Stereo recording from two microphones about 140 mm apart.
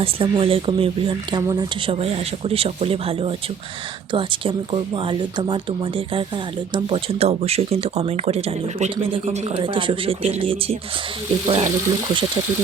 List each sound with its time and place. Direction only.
0.0 s speech: 40° right (ahead or behind)
1.4 s speech: 25° right (ahead or behind)
1.9 s speech: 45° right (ahead or behind)
9.6 s speech: 35° right (ahead or behind)